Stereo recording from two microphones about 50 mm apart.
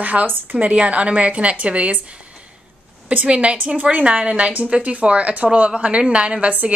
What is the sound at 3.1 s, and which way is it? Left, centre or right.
A woman's voice, right.